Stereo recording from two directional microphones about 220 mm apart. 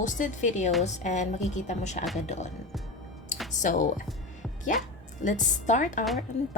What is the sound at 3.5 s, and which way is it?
Speech, 35° left (ahead or behind).